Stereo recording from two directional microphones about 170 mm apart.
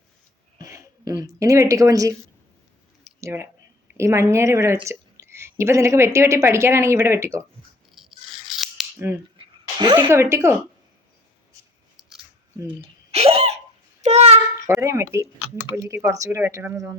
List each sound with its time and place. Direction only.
0.6 s speech: 20° right (ahead or behind)
3.2 s a sound: 15° right (ahead or behind)
3.8 s speech: 15° right (ahead or behind)
7.9 s scissors: centre (ahead or behind)
9.7 s a woman's voice: 30° right (ahead or behind)
10.1 s speech: 15° right (ahead or behind)
12.6 s hiccup: 35° right (ahead or behind)
14.0 s a sound: 40° right (ahead or behind)
14.8 s speech: 15° right (ahead or behind)